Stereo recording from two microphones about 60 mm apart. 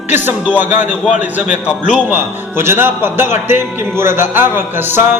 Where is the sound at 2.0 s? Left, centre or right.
Right.